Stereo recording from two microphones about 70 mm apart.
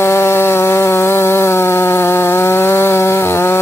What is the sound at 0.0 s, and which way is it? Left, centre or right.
Chainsaw, left.